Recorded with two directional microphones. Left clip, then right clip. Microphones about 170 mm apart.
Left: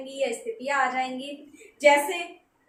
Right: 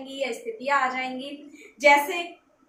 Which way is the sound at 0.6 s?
5° left (ahead or behind).